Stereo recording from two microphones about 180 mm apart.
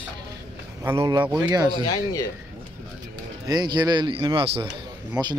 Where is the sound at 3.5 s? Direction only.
25° right (ahead or behind).